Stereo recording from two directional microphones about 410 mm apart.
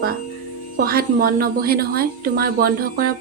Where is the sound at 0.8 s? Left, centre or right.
Right.